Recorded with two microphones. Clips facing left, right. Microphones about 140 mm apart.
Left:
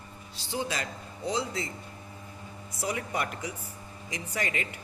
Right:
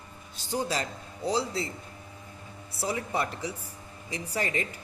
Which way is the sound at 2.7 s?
30° right (ahead or behind).